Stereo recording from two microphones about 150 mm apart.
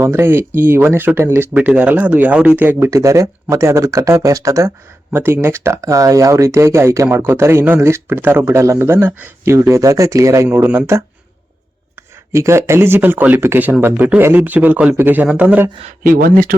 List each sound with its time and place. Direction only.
0.0 s speech: 15° right (ahead or behind)
12.3 s speech: 20° right (ahead or behind)
16.0 s speech: 75° right (ahead or behind)